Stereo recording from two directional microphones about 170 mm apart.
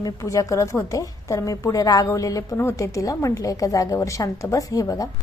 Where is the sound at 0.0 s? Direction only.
20° left (ahead or behind).